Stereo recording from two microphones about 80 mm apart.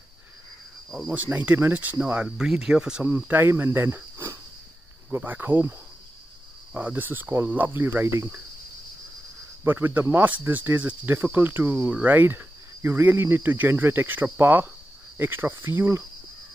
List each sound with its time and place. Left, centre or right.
1.1 s speech: centre
2.2 s speech: centre
3.3 s speech: right
9.7 s speech: right